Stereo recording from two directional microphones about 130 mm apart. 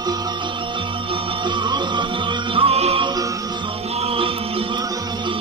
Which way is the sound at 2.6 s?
45° right (ahead or behind).